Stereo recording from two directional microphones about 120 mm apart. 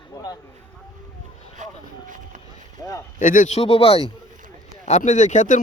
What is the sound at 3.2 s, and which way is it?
Speech, 90° left.